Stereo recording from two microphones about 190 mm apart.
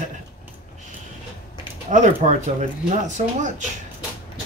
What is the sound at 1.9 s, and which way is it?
Speech, 40° right (ahead or behind).